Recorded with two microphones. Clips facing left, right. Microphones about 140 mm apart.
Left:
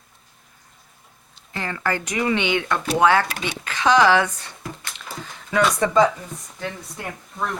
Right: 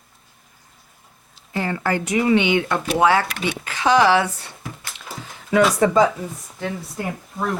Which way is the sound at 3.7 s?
10° right (ahead or behind).